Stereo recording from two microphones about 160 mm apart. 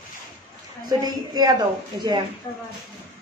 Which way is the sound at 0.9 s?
25° right (ahead or behind).